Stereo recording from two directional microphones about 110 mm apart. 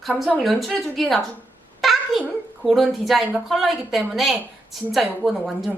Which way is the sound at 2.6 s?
Centre (ahead or behind).